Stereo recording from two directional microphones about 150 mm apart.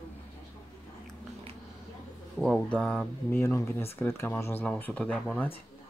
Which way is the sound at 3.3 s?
20° left (ahead or behind).